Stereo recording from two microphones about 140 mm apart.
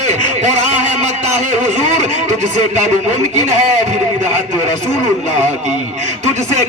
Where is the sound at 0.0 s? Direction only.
55° right (ahead or behind).